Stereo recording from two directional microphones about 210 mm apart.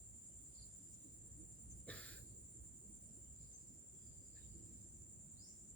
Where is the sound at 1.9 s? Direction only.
5° left (ahead or behind).